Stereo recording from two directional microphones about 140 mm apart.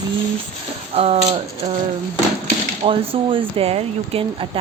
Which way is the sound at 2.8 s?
40° right (ahead or behind).